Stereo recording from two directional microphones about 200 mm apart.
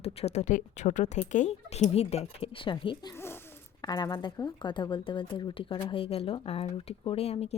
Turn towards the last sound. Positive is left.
turn(degrees=30)  # may be behind; listen again after turning